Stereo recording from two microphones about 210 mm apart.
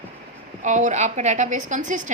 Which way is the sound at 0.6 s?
35° right (ahead or behind).